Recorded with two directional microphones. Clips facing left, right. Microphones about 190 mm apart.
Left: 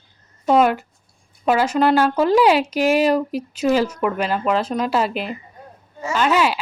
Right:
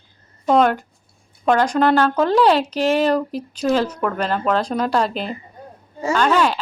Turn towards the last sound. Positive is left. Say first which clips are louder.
# right 1 dB
turn(degrees=5)  # may be behind; listen again after turning